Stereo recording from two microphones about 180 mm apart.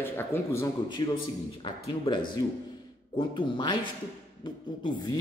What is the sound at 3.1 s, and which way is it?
Speech, 25° left (ahead or behind).